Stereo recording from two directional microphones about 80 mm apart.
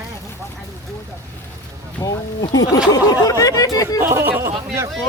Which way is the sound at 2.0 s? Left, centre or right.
Left.